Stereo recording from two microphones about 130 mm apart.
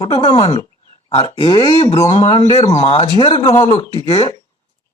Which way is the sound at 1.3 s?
35° left (ahead or behind).